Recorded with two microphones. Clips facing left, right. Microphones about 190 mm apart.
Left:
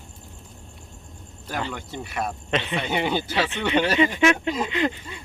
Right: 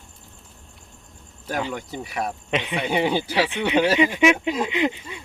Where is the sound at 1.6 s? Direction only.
10° right (ahead or behind).